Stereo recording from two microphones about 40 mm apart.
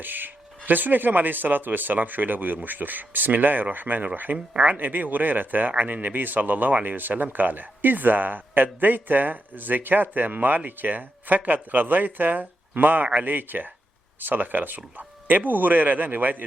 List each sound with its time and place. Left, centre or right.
0.0 s a man's voice: right
4.5 s speech: right
4.8 s a man's voice: right